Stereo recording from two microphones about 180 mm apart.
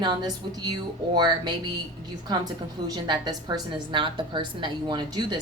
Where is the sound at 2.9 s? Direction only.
25° right (ahead or behind).